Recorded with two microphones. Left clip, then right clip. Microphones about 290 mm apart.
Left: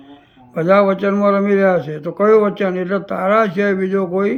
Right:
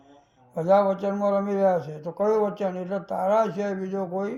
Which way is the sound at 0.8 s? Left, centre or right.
Centre.